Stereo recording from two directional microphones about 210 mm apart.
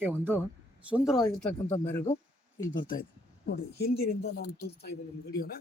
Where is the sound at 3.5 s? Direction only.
50° left (ahead or behind).